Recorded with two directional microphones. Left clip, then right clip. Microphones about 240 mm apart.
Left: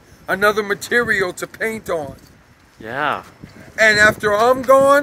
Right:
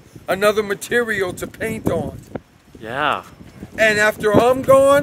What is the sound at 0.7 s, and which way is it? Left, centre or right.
Speech, centre.